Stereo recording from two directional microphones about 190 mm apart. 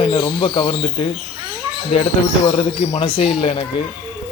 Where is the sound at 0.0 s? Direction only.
30° left (ahead or behind).